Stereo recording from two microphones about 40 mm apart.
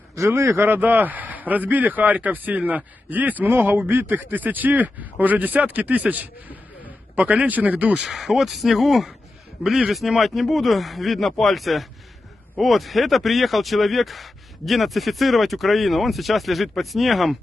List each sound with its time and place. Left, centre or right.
0.3 s speech: right
3.4 s speech: right
4.0 s speech: right
7.4 s speech: right
8.1 s speech: centre